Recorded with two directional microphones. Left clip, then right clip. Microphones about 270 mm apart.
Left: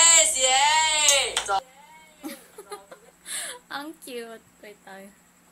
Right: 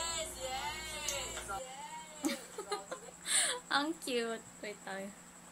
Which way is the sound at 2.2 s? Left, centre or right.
Centre.